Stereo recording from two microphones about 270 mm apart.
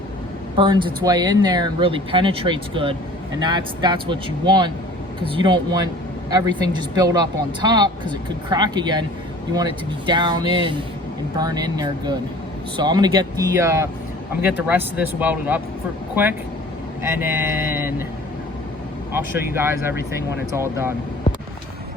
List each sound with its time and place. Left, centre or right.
0.5 s speech: centre
10.1 s speech: centre
17.0 s speech: centre
19.1 s speech: centre